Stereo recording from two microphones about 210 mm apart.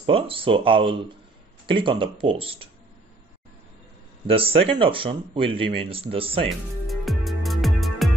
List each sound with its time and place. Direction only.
0.0 s speech: 25° right (ahead or behind)
4.3 s speech: 25° right (ahead or behind)
6.9 s music: centre (ahead or behind)